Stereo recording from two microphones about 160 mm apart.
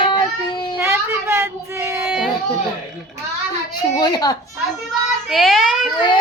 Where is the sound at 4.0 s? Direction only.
25° left (ahead or behind).